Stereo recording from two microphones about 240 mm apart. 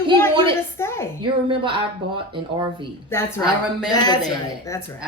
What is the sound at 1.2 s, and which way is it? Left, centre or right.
A woman's voice, right.